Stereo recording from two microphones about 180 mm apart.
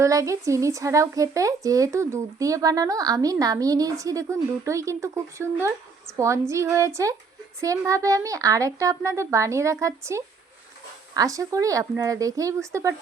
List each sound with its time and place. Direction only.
0.0 s speech: 15° right (ahead or behind)